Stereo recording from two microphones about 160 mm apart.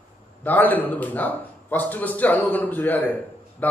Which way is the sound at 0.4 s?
10° left (ahead or behind).